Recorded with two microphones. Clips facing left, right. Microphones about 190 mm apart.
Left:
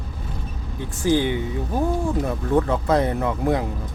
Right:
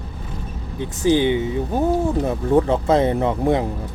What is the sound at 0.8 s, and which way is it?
Speech, 20° right (ahead or behind).